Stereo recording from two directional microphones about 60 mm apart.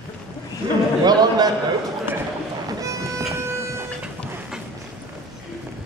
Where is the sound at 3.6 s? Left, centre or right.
Right.